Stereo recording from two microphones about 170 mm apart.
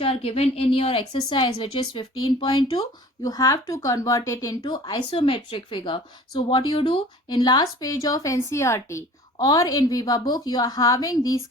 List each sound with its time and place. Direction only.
0.0 s a woman's voice: 35° left (ahead or behind)